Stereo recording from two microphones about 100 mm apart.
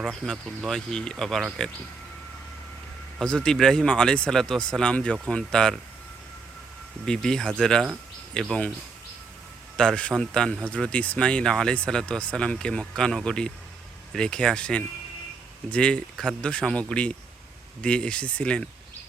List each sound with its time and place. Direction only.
0.0 s speech: centre (ahead or behind)
3.2 s speech: 5° left (ahead or behind)
7.0 s speech: 5° left (ahead or behind)
9.7 s speech: 10° left (ahead or behind)